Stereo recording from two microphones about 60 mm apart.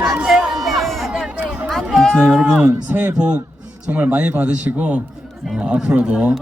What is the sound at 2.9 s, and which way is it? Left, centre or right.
Speech, right.